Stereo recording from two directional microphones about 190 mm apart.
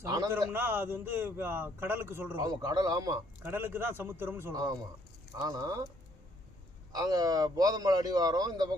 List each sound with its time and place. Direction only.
0.0 s a man's voice: 15° right (ahead or behind)
6.9 s a man's voice: 20° right (ahead or behind)